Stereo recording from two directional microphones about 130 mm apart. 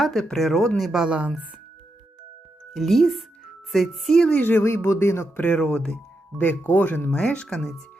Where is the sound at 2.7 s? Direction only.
Centre (ahead or behind).